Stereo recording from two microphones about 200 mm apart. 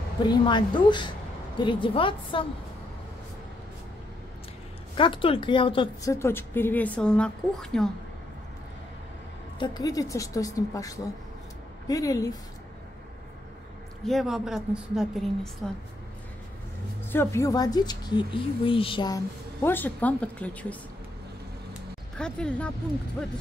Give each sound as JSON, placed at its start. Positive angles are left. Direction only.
{"t": 0.3, "sound": "a woman's voice", "side_deg": 20}
{"t": 4.9, "sound": "a woman's voice", "side_deg": 25}
{"t": 6.1, "sound": "a woman's voice", "side_deg": 10}
{"t": 9.6, "sound": "a woman's voice", "side_deg": 20}
{"t": 14.0, "sound": "a woman's voice", "side_deg": 0}
{"t": 17.1, "sound": "a woman's voice", "side_deg": 10}
{"t": 22.2, "sound": "a woman's voice", "side_deg": 5}